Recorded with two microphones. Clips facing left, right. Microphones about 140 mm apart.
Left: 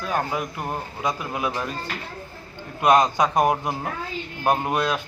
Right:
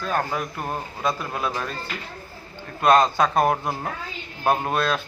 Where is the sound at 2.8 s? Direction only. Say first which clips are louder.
Even; 15° left (ahead or behind).